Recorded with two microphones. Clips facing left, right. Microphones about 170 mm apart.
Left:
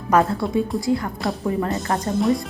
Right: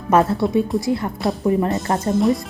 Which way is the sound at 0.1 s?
25° right (ahead or behind).